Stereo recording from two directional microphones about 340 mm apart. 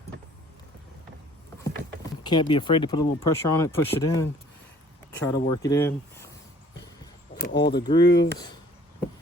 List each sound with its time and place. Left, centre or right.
2.2 s speech: centre
7.4 s speech: left
7.9 s speech: centre